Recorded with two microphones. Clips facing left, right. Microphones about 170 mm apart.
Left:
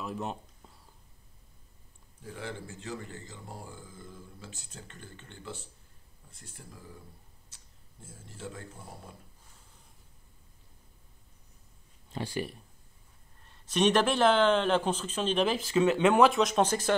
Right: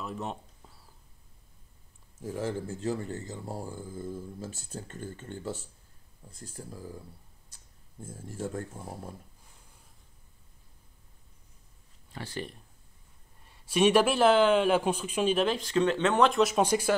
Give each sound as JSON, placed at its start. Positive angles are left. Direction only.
{"t": 0.0, "sound": "speech", "side_deg": 0}
{"t": 2.1, "sound": "speech", "side_deg": -40}
{"t": 8.0, "sound": "speech", "side_deg": -50}
{"t": 12.1, "sound": "speech", "side_deg": 15}
{"t": 13.5, "sound": "a man's voice", "side_deg": -10}
{"t": 15.4, "sound": "speech", "side_deg": 5}